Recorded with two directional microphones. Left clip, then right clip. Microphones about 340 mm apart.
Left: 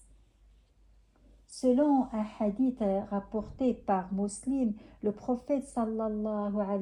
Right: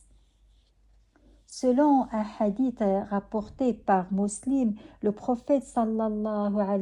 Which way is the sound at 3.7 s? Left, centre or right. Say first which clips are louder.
Right 7 dB; right.